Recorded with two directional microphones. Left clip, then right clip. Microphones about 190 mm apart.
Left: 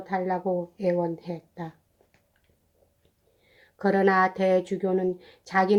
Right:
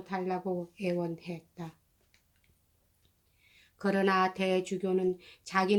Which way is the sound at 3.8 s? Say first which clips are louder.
Left 6 dB; 20° left (ahead or behind).